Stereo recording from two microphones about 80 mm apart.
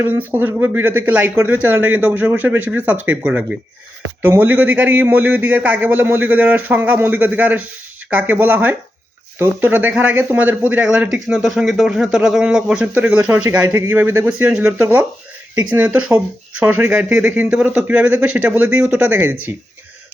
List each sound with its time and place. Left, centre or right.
0.0 s speech: right
11.4 s speech: centre
12.8 s speech: right
14.3 s speech: centre
17.5 s speech: centre
19.0 s speech: right